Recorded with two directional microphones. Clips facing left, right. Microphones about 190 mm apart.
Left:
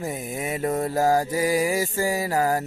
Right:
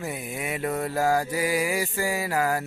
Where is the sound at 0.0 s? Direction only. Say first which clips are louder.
Left 3 dB; 40° left (ahead or behind).